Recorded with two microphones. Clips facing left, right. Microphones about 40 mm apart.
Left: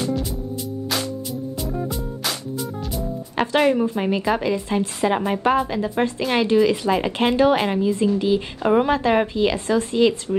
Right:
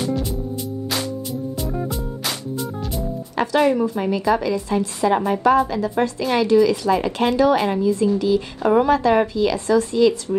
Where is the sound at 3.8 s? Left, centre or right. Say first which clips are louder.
Right 1 dB; left.